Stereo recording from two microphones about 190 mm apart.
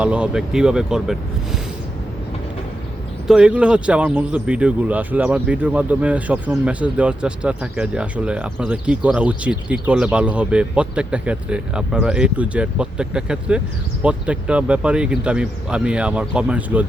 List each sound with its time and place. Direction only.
0.0 s speech: 5° right (ahead or behind)
3.2 s speech: 5° right (ahead or behind)